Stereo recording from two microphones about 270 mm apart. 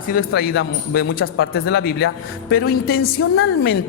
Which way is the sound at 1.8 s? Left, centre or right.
Left.